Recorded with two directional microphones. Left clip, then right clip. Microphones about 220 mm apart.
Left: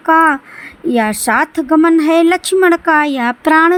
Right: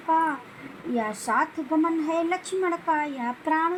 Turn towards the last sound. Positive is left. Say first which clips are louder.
# left 15 dB
turn(degrees=40)  # may be behind; listen again after turning